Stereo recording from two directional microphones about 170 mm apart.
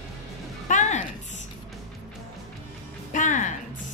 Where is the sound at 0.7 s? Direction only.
45° left (ahead or behind).